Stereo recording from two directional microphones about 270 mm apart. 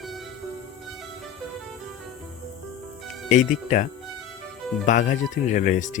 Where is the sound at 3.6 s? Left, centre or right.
Left.